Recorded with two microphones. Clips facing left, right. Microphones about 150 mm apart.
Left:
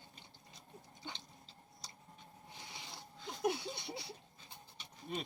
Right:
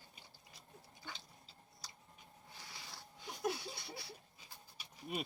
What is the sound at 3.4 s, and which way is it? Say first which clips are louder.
Laughter: left 4 dB; 20° left (ahead or behind).